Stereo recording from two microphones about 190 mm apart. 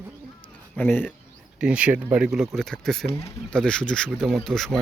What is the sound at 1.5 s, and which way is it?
Speech, 5° right (ahead or behind).